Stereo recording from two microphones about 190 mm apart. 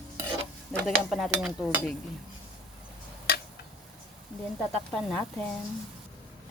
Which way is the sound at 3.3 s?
55° left (ahead or behind).